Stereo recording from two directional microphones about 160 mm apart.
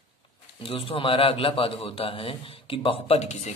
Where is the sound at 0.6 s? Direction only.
35° left (ahead or behind).